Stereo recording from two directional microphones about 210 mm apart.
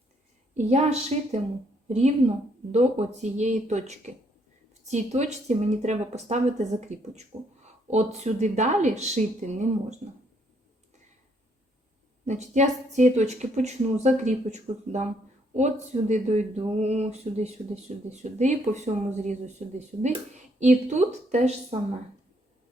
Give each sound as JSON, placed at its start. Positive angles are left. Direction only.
{"t": 0.5, "sound": "a woman's voice", "side_deg": -30}
{"t": 12.2, "sound": "a woman's voice", "side_deg": -35}